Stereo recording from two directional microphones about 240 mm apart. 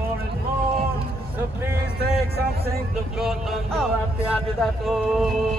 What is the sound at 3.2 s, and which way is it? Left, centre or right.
Speech, centre.